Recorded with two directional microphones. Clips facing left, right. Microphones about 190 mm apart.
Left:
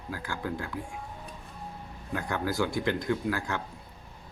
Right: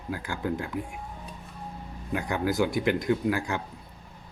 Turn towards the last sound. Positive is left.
turn(degrees=-15)  # may be behind; listen again after turning